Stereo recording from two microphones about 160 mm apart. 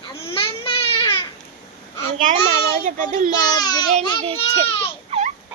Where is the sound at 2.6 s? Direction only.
60° right (ahead or behind).